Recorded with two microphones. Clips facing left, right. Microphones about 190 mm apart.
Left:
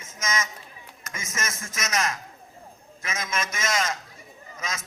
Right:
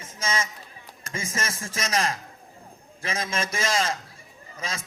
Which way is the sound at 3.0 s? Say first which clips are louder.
Right 2 dB; 30° right (ahead or behind).